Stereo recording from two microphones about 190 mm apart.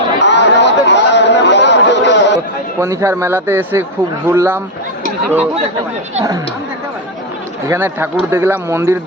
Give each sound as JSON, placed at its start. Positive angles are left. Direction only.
{"t": 0.2, "sound": "chatter", "side_deg": 65}
{"t": 2.8, "sound": "a man's voice", "side_deg": -15}
{"t": 7.7, "sound": "a man's voice", "side_deg": -10}